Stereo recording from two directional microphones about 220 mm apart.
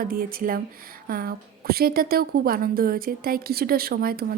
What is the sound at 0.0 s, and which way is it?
A woman's voice, 40° right (ahead or behind).